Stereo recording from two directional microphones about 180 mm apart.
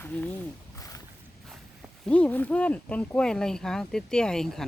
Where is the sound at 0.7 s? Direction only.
20° left (ahead or behind).